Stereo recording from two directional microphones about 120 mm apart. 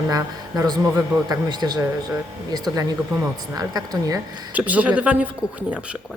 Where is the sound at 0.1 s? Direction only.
30° right (ahead or behind).